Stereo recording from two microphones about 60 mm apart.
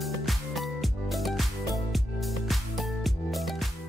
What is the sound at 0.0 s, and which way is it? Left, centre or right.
Music, centre.